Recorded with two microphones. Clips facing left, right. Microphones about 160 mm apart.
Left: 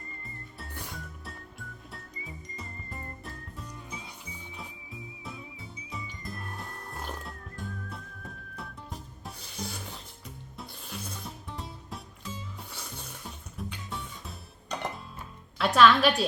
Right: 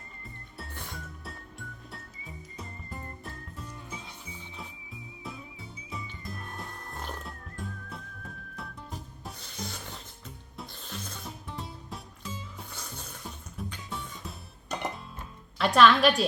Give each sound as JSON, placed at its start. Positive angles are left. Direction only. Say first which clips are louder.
{"t": 1.2, "sound": "music", "louder": "right 1 dB", "side_deg": 0}
{"t": 15.5, "sound": "a woman's voice", "louder": "even", "side_deg": 0}